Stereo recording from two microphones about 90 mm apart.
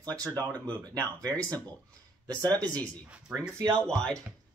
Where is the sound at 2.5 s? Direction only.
15° left (ahead or behind).